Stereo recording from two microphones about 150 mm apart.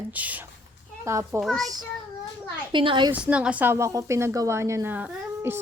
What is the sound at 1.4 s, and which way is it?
Speech, centre (ahead or behind).